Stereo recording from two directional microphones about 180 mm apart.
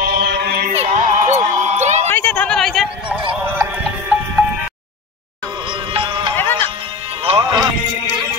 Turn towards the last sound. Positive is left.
turn(degrees=-25)  # may be behind; listen again after turning